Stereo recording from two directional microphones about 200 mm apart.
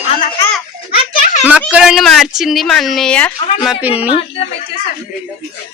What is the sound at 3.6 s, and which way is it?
Speech, 5° right (ahead or behind).